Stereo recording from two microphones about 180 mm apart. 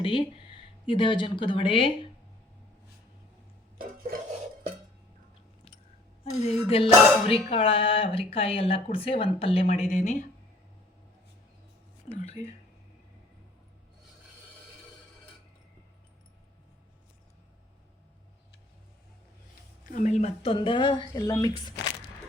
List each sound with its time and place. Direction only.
0.0 s speech: 30° left (ahead or behind)
3.8 s a sound: 50° right (ahead or behind)
6.3 s speech: 35° left (ahead or behind)
12.1 s speech: 40° left (ahead or behind)
19.8 s speech: 45° left (ahead or behind); by 21.5 s 20° left (ahead or behind)